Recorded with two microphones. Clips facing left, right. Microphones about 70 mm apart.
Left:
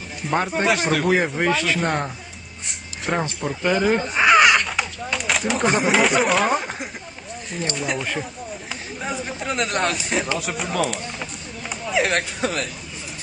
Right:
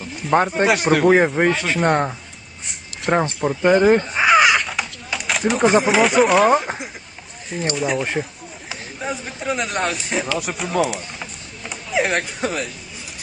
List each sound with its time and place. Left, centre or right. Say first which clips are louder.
0.3 s speech: right 4 dB; centre
1.0 s speech: right 8 dB; right
1.5 s speech: right 3 dB; centre
3.4 s speech: right 5 dB; centre
3.8 s crow: right 4 dB; centre
7.5 s speech: right 4 dB; centre
10.3 s a sound: right 3 dB; centre